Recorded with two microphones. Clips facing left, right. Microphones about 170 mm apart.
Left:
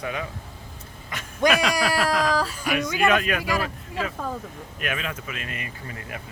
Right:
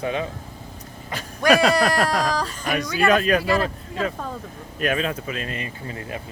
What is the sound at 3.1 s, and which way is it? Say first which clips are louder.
Speech: right 6 dB; 35° right (ahead or behind).